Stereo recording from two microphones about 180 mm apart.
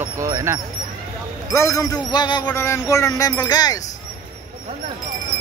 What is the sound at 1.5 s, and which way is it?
Speech, 15° left (ahead or behind).